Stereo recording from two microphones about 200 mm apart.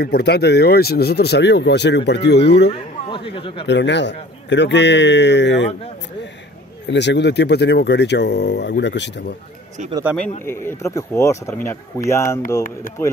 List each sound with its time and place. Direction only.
0.0 s speech: 55° left (ahead or behind)
3.1 s speech: 25° left (ahead or behind)
3.6 s speech: 60° left (ahead or behind)
6.9 s speech: 60° left (ahead or behind)
10.4 s speech: 10° left (ahead or behind)